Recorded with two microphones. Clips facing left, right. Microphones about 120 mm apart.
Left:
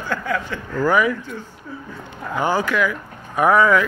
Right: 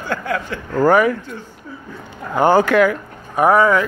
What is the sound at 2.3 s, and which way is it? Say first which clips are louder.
Speech: right 7 dB; 55° right (ahead or behind).